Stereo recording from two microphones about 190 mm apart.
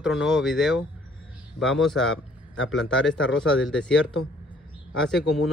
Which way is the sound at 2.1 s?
90° left.